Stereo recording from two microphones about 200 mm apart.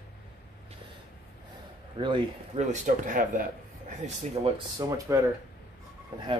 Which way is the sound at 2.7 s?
40° right (ahead or behind).